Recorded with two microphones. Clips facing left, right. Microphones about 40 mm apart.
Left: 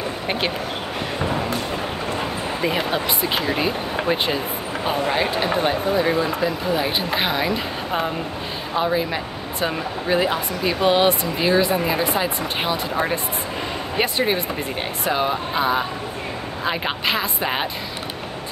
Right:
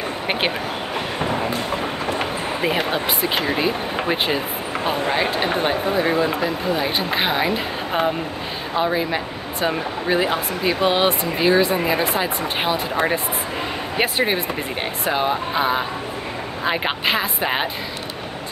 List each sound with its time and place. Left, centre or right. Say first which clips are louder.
3.5 s speech: right 1 dB; centre
13.9 s speech: right 1 dB; centre